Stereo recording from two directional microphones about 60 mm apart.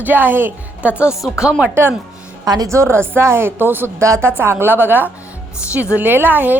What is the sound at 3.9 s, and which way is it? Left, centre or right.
Speech, right.